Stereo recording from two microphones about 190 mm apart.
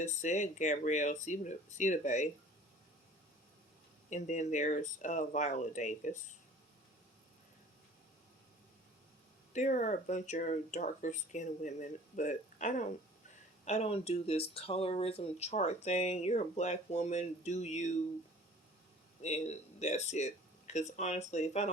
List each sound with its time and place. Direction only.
0.0 s speech: 40° left (ahead or behind)
4.1 s speech: 40° left (ahead or behind)
9.5 s speech: 40° left (ahead or behind)
19.2 s speech: 35° left (ahead or behind)